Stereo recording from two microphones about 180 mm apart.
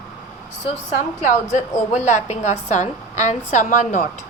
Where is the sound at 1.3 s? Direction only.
45° left (ahead or behind).